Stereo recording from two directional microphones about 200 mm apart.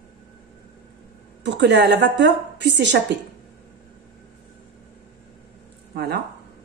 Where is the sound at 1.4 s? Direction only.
60° right (ahead or behind).